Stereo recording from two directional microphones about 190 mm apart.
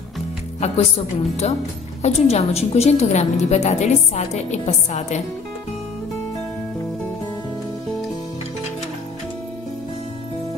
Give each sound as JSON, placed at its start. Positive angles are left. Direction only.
{"t": 0.6, "sound": "a woman's voice", "side_deg": 35}